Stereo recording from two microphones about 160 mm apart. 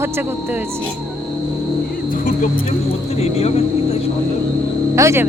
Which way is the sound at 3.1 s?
40° left (ahead or behind).